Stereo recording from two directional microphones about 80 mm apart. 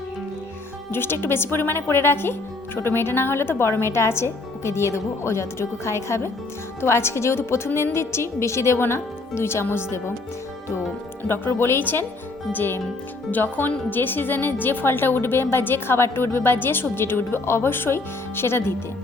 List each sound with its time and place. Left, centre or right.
0.9 s a woman's voice: left
11.3 s a woman's voice: left